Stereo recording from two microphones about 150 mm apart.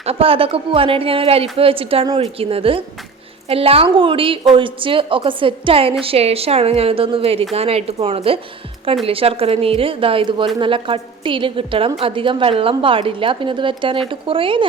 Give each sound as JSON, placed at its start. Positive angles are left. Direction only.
{"t": 0.0, "sound": "a woman's voice", "side_deg": -40}